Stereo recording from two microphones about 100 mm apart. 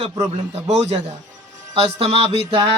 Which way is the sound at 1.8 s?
85° right.